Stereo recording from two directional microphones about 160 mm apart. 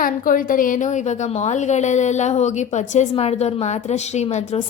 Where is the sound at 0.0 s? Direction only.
60° left (ahead or behind).